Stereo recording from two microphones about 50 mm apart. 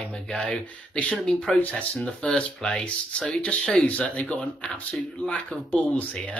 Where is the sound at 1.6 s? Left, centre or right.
Left.